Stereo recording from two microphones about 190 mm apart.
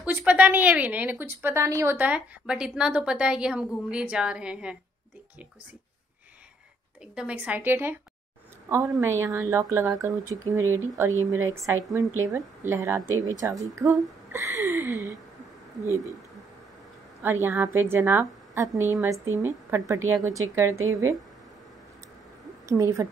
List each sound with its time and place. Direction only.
0.0 s a woman's voice: 5° right (ahead or behind)
7.2 s a woman's voice: 5° right (ahead or behind)
17.2 s a woman's voice: 10° right (ahead or behind)
22.7 s a woman's voice: 15° right (ahead or behind)